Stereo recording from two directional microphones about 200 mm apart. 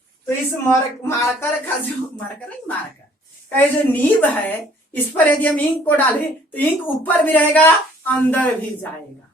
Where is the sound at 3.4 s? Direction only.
10° left (ahead or behind).